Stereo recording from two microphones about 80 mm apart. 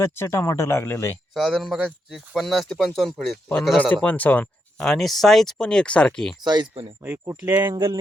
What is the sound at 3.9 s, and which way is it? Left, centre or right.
Speech, centre.